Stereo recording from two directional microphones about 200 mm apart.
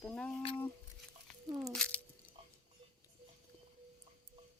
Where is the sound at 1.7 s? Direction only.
5° left (ahead or behind).